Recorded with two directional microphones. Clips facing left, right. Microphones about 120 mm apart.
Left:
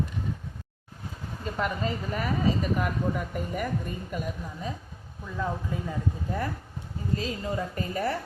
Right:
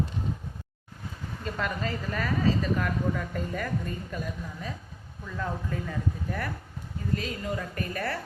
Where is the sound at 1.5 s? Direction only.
20° left (ahead or behind).